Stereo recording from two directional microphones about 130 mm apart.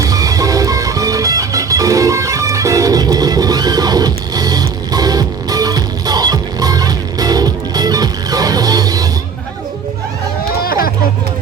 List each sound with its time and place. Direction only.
0.0 s music: 25° right (ahead or behind)